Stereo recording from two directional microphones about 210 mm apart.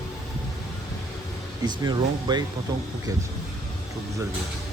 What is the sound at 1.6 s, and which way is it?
Speech, 20° right (ahead or behind).